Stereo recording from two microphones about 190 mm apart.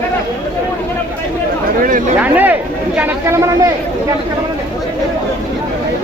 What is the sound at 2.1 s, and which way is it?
Speech, 10° right (ahead or behind).